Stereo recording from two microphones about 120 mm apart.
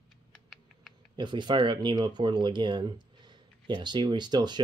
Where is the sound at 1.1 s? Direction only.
40° right (ahead or behind).